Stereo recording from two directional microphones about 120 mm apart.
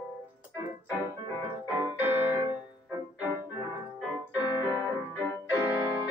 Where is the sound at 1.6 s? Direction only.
15° right (ahead or behind).